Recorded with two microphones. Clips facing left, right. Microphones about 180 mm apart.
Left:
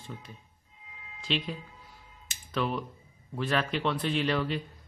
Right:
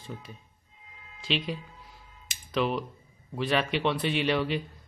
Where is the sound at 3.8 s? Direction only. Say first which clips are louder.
Right 2 dB; 5° right (ahead or behind).